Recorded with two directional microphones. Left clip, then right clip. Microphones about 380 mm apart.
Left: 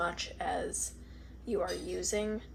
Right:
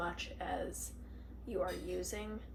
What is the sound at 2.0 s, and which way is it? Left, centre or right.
Speech, centre.